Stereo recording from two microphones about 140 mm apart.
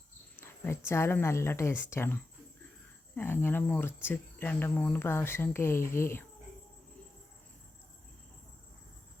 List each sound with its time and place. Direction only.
0.3 s cricket: 15° left (ahead or behind)
0.9 s speech: 15° left (ahead or behind)